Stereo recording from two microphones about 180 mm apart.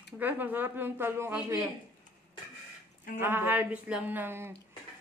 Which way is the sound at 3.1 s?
10° right (ahead or behind).